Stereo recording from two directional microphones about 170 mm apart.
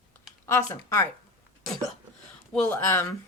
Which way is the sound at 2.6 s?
15° left (ahead or behind).